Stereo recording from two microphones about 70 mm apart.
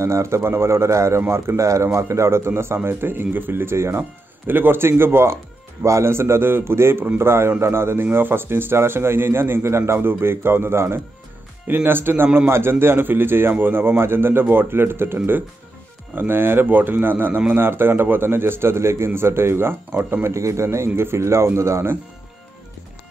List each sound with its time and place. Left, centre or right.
0.0 s speech: right
20.3 s speech: right